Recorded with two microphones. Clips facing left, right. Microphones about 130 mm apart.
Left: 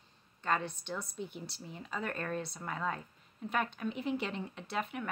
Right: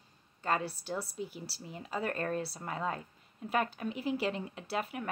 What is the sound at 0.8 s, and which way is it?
Speech, 35° right (ahead or behind).